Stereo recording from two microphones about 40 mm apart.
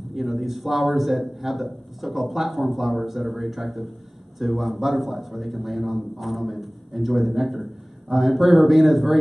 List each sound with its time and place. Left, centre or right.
0.1 s a man's voice: centre